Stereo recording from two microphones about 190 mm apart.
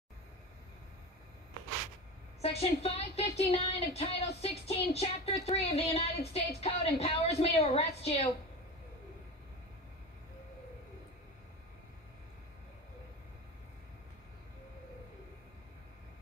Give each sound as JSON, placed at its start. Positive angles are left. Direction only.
{"t": 2.4, "sound": "speech", "side_deg": 30}